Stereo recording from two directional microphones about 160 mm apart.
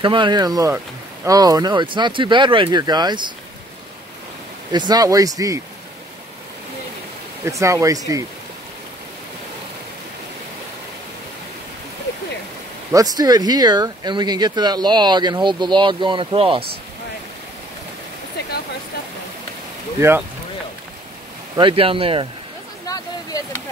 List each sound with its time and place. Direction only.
0.0 s speech: 30° right (ahead or behind)
4.7 s speech: 25° right (ahead or behind)
7.4 s speech: 20° right (ahead or behind)
12.9 s speech: 25° right (ahead or behind)
20.0 s speech: 15° right (ahead or behind)
21.5 s speech: 35° right (ahead or behind)
22.8 s a sound: 20° left (ahead or behind)